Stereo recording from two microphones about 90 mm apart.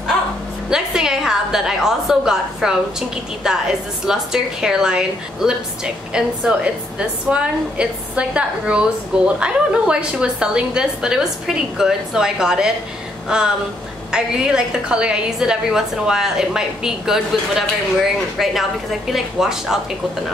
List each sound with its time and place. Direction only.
0.7 s a woman's voice: 5° right (ahead or behind)